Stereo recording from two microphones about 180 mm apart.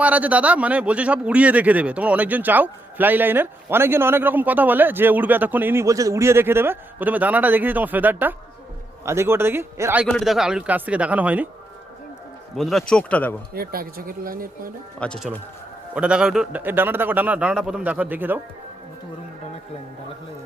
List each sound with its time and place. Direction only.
0.0 s a man's voice: 10° right (ahead or behind)
10.1 s a man's voice: centre (ahead or behind)
12.5 s speech: centre (ahead or behind)
13.5 s speech: 55° right (ahead or behind)
14.9 s speech: 5° left (ahead or behind)
16.0 s a man's voice: 5° right (ahead or behind)